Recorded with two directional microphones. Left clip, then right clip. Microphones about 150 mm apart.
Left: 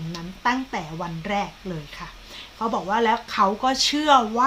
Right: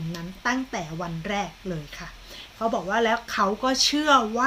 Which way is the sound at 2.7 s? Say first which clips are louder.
Left 3 dB; 5° left (ahead or behind).